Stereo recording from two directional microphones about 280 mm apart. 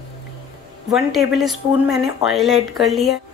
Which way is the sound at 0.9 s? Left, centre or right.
Centre.